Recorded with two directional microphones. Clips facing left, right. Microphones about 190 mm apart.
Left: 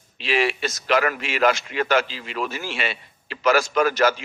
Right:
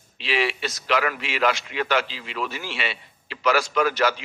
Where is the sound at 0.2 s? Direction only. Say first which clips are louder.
Left 3 dB; 45° left (ahead or behind).